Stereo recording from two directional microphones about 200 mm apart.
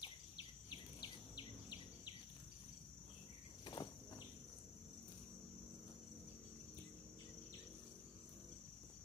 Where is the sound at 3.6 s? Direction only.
20° left (ahead or behind).